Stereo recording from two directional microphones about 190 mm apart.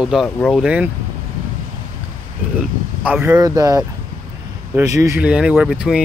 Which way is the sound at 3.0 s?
10° right (ahead or behind).